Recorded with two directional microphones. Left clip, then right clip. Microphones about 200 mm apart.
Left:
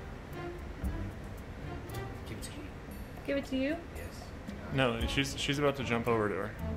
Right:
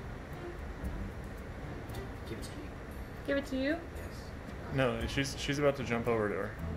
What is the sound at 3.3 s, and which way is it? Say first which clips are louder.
Speech: even; 20° left (ahead or behind).